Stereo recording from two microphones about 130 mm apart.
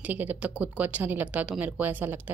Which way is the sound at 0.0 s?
15° right (ahead or behind).